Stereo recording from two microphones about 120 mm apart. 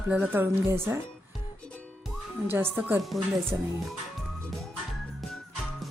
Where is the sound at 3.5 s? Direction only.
20° right (ahead or behind).